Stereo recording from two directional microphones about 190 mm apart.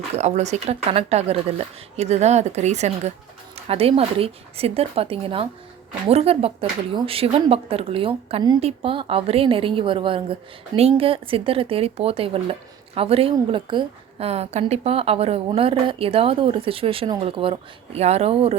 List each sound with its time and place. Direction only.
0.2 s a woman's voice: 35° right (ahead or behind)